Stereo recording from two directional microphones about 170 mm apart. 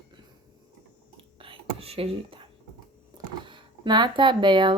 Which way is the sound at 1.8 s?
35° right (ahead or behind).